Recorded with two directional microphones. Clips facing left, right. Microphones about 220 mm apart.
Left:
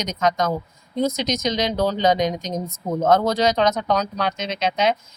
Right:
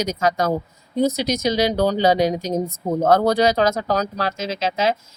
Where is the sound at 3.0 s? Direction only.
35° right (ahead or behind).